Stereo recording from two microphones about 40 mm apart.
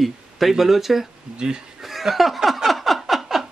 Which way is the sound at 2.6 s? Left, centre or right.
Centre.